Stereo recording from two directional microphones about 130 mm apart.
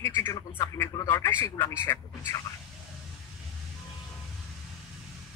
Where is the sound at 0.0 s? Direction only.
20° left (ahead or behind).